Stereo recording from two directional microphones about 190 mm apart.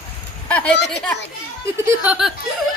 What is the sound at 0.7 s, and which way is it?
Speech, 65° left (ahead or behind).